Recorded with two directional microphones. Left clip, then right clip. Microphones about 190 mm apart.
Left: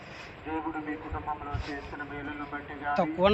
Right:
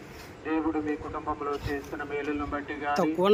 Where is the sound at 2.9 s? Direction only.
15° right (ahead or behind).